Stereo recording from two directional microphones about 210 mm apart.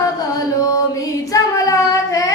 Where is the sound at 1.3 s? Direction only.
15° left (ahead or behind).